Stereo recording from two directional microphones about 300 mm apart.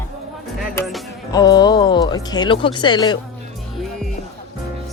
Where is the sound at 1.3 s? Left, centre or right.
Centre.